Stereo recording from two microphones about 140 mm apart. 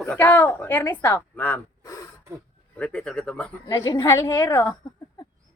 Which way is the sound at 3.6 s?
30° left (ahead or behind).